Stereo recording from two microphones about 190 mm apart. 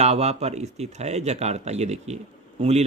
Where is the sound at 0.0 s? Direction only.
35° right (ahead or behind).